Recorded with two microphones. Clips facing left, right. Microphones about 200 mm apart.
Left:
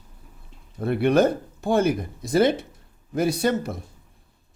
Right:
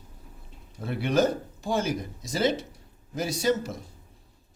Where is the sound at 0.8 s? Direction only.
55° left (ahead or behind).